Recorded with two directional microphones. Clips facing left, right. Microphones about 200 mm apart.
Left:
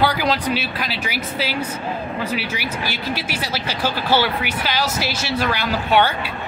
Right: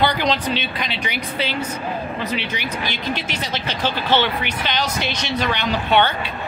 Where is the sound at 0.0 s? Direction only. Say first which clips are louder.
Even; 5° left (ahead or behind).